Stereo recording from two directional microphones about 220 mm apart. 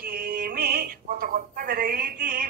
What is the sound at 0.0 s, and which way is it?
Music, 40° right (ahead or behind).